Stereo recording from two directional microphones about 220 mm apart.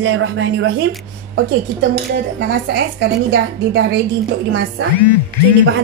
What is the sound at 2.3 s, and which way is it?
A woman's voice, 55° right (ahead or behind).